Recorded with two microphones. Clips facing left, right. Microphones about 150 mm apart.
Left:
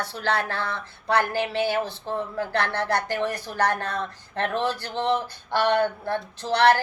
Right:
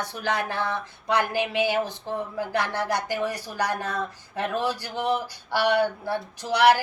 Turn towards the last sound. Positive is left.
turn(degrees=-10)  # may be behind; listen again after turning